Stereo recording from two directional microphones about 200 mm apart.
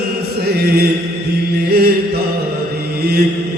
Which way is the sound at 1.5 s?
50° right (ahead or behind).